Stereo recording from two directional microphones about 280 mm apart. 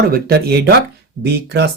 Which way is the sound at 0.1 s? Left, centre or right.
Right.